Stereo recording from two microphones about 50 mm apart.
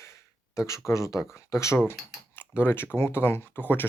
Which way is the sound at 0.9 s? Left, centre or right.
Left.